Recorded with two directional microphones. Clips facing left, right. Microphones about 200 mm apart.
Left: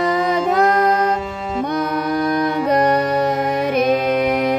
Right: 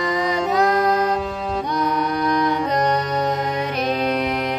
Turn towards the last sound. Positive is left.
turn(degrees=5)  # may be behind; listen again after turning